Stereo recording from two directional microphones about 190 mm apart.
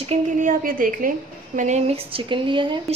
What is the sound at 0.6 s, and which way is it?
A woman's voice, 45° right (ahead or behind).